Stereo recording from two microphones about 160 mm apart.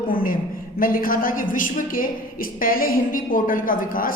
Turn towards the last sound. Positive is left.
turn(degrees=60)  # may be behind; listen again after turning